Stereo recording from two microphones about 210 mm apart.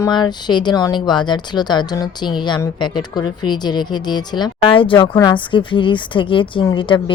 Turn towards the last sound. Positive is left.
turn(degrees=25)  # may be behind; listen again after turning